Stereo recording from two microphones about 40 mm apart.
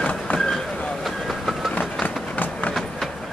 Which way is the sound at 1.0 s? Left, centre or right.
Centre.